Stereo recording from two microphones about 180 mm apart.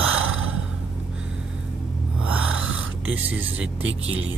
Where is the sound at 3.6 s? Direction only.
90° right.